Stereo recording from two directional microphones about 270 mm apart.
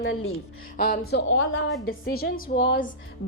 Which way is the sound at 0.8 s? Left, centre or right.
Left.